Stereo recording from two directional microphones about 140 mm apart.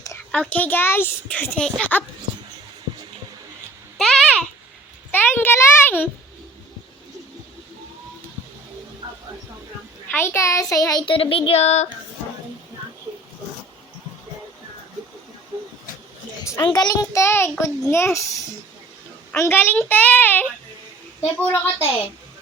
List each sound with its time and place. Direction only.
0.3 s a child's voice: 10° left (ahead or behind)
3.9 s babbling: centre (ahead or behind)
5.1 s a sound: 15° left (ahead or behind)
10.1 s child singing: 15° left (ahead or behind); by 11.9 s 50° left (ahead or behind)
16.6 s child singing: 30° left (ahead or behind)
19.3 s a child's voice: 15° left (ahead or behind)